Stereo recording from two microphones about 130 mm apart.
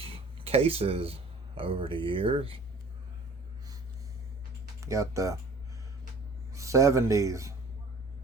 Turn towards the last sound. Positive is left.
turn(degrees=-25)  # may be behind; listen again after turning